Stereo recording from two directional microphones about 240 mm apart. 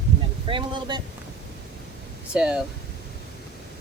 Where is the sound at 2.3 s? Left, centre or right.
Centre.